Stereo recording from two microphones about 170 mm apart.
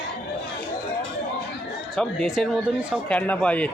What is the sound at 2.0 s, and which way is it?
Speech, centre (ahead or behind).